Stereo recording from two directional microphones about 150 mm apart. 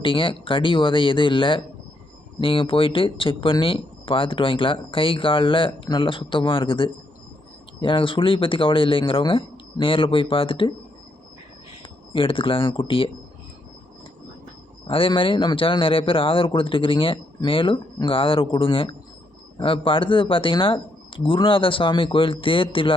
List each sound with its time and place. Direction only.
0.0 s speech: 35° left (ahead or behind)
11.8 s speech: 35° left (ahead or behind)
14.8 s speech: 35° left (ahead or behind)